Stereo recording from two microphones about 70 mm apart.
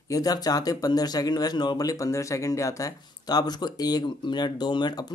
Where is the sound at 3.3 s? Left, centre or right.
Left.